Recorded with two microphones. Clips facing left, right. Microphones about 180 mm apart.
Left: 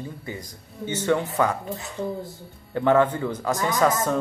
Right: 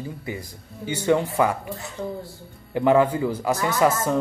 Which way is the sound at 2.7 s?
10° right (ahead or behind).